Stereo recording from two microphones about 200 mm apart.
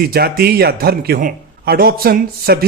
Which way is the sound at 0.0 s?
50° right (ahead or behind).